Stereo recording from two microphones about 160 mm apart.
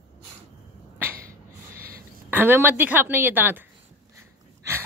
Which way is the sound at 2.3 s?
10° right (ahead or behind).